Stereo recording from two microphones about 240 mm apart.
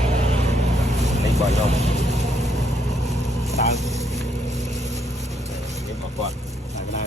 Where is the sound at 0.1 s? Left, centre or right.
Right.